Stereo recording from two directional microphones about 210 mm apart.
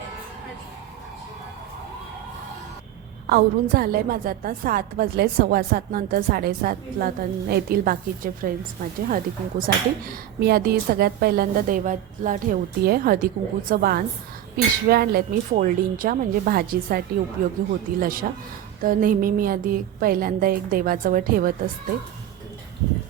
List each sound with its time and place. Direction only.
3.2 s a woman's voice: 45° right (ahead or behind)